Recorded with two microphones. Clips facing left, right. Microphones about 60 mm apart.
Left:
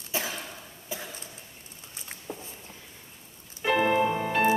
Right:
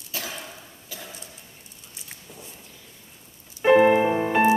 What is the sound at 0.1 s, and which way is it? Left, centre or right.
Cough, left.